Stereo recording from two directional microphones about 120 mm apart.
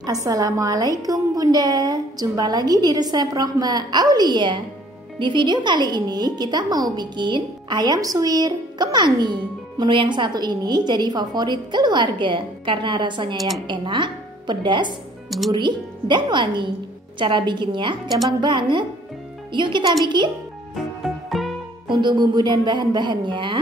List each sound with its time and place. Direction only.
0.0 s speech: 30° right (ahead or behind)
15.2 s speech: centre (ahead or behind)
15.5 s speech: 40° right (ahead or behind)
18.0 s speech: centre (ahead or behind)
18.4 s speech: 40° right (ahead or behind)
20.7 s music: centre (ahead or behind)
21.8 s speech: 40° right (ahead or behind)